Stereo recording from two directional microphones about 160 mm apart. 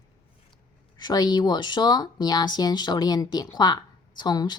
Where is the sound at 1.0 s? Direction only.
25° left (ahead or behind).